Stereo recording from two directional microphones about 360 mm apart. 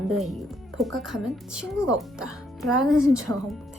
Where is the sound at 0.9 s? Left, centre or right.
Centre.